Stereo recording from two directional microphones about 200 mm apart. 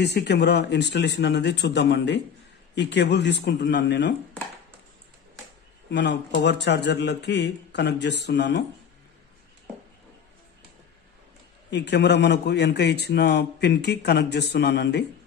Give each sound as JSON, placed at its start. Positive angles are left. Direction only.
{"t": 0.0, "sound": "a man's voice", "side_deg": 55}
{"t": 5.9, "sound": "a man's voice", "side_deg": 60}
{"t": 11.7, "sound": "a man's voice", "side_deg": 60}